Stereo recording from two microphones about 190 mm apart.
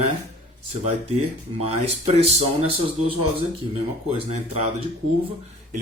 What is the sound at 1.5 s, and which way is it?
Speech, 35° right (ahead or behind).